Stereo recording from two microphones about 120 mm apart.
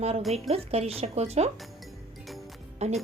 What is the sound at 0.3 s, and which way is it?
Speech, 60° right (ahead or behind).